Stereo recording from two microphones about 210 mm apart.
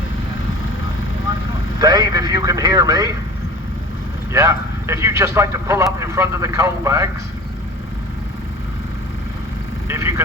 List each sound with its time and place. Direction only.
1.8 s a man's voice: 20° right (ahead or behind)
4.3 s a man's voice: 15° right (ahead or behind)
9.9 s vehicle: 15° right (ahead or behind)